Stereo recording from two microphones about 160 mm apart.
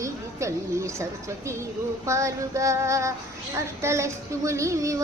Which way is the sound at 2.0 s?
20° right (ahead or behind).